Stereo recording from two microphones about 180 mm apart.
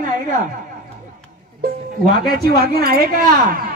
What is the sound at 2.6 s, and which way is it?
Speech, 55° right (ahead or behind).